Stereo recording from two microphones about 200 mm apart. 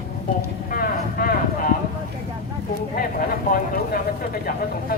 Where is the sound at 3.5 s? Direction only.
45° left (ahead or behind).